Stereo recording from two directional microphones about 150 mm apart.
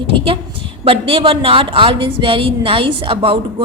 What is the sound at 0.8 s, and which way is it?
A woman's voice, 40° right (ahead or behind).